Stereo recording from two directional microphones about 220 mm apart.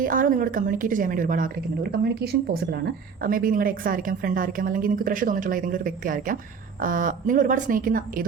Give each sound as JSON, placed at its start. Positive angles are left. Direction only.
{"t": 0.0, "sound": "a woman's voice", "side_deg": -40}